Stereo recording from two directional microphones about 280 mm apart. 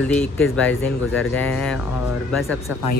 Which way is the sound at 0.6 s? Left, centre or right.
Centre.